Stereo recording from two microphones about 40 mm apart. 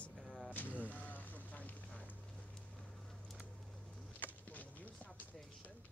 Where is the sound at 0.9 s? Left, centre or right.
Left.